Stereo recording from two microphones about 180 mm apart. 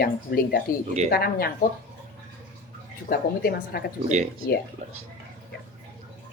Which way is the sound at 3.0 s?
55° left (ahead or behind).